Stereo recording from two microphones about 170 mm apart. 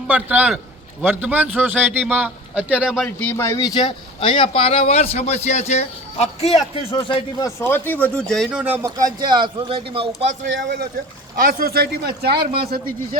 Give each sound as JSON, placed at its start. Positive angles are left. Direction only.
{"t": 0.1, "sound": "speech", "side_deg": -10}
{"t": 3.2, "sound": "speech", "side_deg": 10}
{"t": 7.6, "sound": "speech", "side_deg": 10}
{"t": 11.3, "sound": "speech", "side_deg": -60}
{"t": 12.5, "sound": "a man's voice", "side_deg": -60}